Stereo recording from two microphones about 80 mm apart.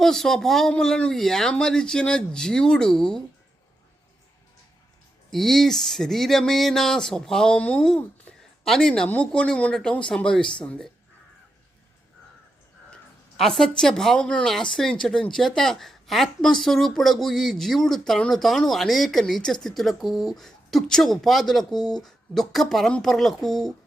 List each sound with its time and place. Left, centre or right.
0.0 s speech: centre
5.3 s a woman's voice: centre
7.9 s a sound: centre
8.4 s a sound: centre
9.1 s speech: centre
12.9 s a woman's voice: centre